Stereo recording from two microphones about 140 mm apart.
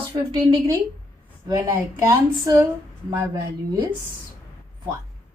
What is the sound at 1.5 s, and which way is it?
Speech, 25° right (ahead or behind).